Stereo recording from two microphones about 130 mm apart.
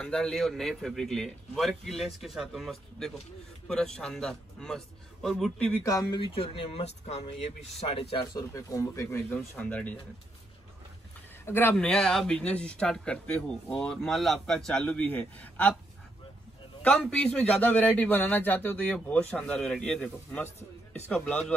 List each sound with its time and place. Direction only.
0.0 s a man's voice: 5° left (ahead or behind)
5.9 s speech: 30° left (ahead or behind)
6.3 s speech: 45° left (ahead or behind)
8.4 s speech: 25° left (ahead or behind)
9.3 s speech: 15° left (ahead or behind)
11.4 s speech: 15° left (ahead or behind)
17.0 s speech: 5° left (ahead or behind)
20.4 s a man's voice: 60° left (ahead or behind)
21.1 s speech: 10° left (ahead or behind)